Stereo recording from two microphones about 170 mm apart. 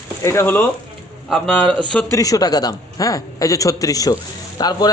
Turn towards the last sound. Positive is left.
turn(degrees=25)  # may be behind; listen again after turning